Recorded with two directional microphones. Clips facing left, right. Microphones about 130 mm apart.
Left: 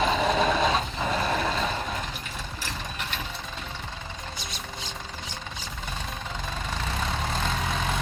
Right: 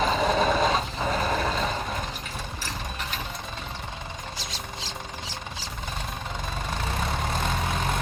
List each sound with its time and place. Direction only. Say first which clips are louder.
0.0 s vehicle: even; centre (ahead or behind)
4.4 s a sound: right 1 dB; 90° right
7.0 s vehicle: even; 10° right (ahead or behind)